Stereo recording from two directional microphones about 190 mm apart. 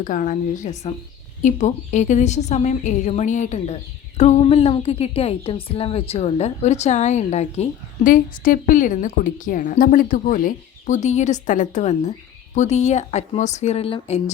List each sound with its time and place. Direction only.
0.0 s a woman's voice: 40° left (ahead or behind)